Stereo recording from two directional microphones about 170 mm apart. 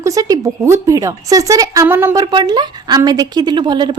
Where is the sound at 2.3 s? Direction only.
25° right (ahead or behind).